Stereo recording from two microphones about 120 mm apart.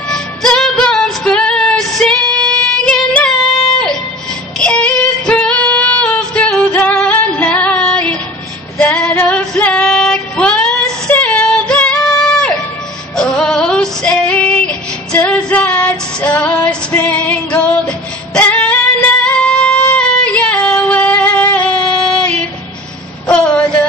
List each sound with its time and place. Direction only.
0.1 s music: 5° left (ahead or behind)
2.8 s female singing: 5° left (ahead or behind)
13.1 s music: 5° left (ahead or behind)
19.2 s female singing: 10° left (ahead or behind)
23.2 s a sound: 10° left (ahead or behind)